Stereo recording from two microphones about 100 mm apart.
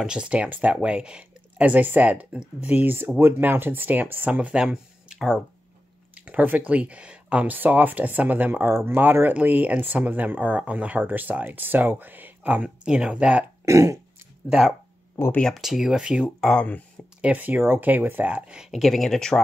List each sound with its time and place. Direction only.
0.0 s speech: 10° right (ahead or behind)
13.7 s throat clearing: 35° right (ahead or behind)
14.4 s speech: 15° right (ahead or behind)
15.3 s speech: 5° left (ahead or behind)
16.3 s speech: 5° left (ahead or behind)
17.2 s speech: 15° right (ahead or behind); by 19.4 s 5° left (ahead or behind)